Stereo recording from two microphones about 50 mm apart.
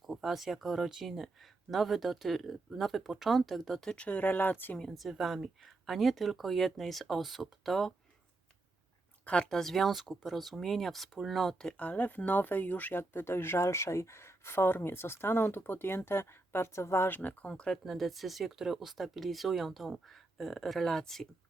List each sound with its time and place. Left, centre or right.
0.0 s speech: centre
3.9 s speech: left
4.2 s speech: left
4.9 s speech: centre
9.2 s speech: left
9.5 s speech: centre
11.8 s speech: left
13.0 s speech: left
17.1 s speech: left
17.5 s speech: centre
17.9 s speech: centre